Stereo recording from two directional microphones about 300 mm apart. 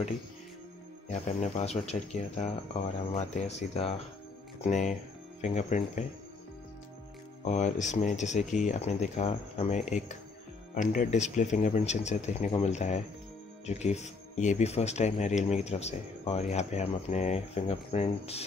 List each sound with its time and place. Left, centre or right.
1.1 s speech: left
7.4 s speech: left